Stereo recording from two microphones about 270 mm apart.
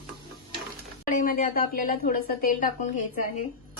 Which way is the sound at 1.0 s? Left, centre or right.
Left.